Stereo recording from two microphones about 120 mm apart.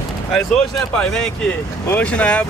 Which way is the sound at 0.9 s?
5° left (ahead or behind).